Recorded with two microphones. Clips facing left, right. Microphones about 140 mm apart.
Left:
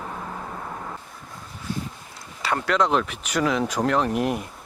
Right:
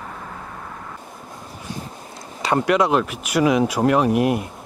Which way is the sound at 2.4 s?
20° right (ahead or behind).